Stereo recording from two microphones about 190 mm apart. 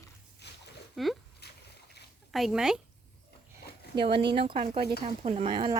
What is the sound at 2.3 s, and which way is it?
Speech, centre (ahead or behind).